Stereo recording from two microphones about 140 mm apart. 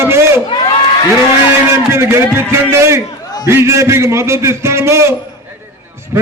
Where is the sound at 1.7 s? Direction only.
15° right (ahead or behind).